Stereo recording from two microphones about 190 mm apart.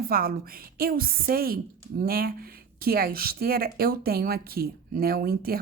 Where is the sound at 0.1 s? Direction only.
50° right (ahead or behind).